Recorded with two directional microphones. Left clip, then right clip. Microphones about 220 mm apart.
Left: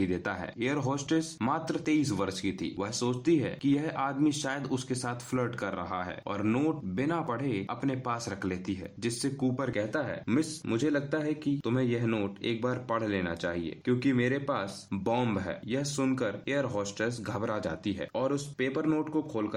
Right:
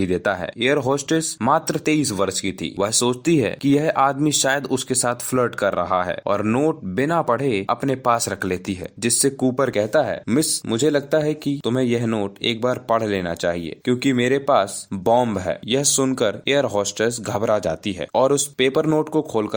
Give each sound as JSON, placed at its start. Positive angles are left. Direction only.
{"t": 0.0, "sound": "speech", "side_deg": -30}